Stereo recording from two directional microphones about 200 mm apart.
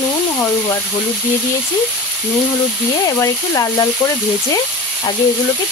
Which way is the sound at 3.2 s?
15° left (ahead or behind).